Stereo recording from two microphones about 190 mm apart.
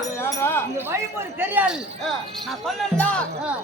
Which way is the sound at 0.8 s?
10° right (ahead or behind).